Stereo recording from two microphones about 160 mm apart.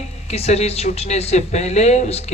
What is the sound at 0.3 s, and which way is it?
Speech, 40° left (ahead or behind).